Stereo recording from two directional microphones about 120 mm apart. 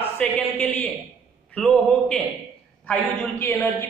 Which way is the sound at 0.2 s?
15° left (ahead or behind).